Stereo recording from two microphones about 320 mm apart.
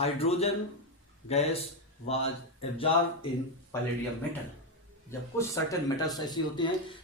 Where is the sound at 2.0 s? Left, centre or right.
Centre.